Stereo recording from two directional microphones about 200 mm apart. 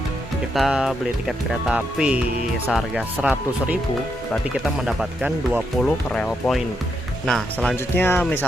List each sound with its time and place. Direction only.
0.5 s speech: centre (ahead or behind)
4.9 s speech: 5° right (ahead or behind)